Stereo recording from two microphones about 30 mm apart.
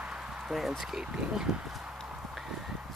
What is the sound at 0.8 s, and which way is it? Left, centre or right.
Speech, right.